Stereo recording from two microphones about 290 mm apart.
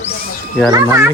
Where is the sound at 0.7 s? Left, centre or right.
Centre.